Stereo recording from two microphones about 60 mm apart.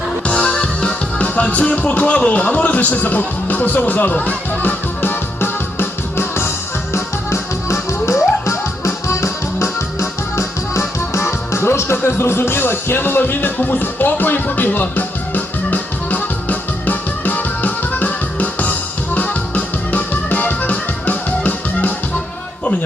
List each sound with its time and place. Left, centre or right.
0.3 s music: centre